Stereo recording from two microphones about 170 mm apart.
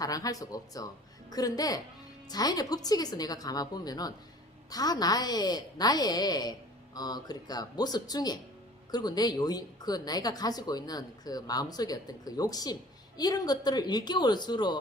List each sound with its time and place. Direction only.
0.0 s a woman's voice: 20° left (ahead or behind)